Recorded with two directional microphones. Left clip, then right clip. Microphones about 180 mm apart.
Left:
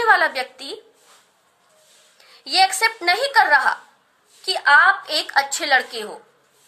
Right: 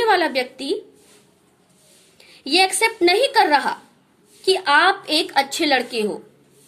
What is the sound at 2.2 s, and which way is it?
A woman's voice, 20° right (ahead or behind).